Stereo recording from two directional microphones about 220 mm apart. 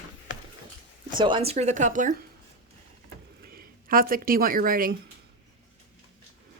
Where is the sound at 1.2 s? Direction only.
20° right (ahead or behind).